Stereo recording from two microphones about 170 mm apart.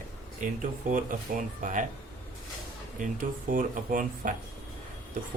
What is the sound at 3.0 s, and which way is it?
Speech, 55° right (ahead or behind).